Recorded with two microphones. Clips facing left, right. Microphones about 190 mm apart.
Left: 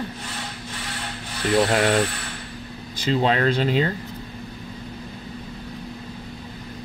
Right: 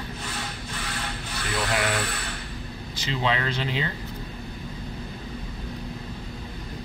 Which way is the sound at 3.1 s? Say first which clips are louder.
Left 6 dB; 45° left (ahead or behind).